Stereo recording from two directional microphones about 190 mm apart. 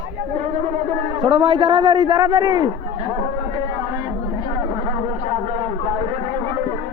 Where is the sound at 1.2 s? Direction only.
25° right (ahead or behind).